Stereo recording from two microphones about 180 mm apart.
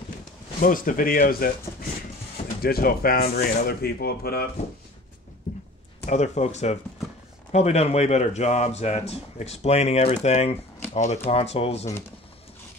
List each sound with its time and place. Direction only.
0.6 s speech: 50° left (ahead or behind)
6.0 s speech: 40° left (ahead or behind)